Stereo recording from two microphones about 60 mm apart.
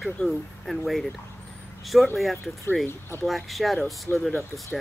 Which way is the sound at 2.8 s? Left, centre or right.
Left.